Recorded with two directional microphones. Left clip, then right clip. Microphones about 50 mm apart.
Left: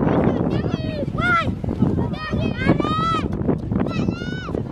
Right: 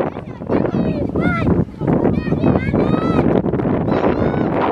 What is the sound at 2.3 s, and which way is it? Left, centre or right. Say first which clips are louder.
Vehicle: right 4 dB; left.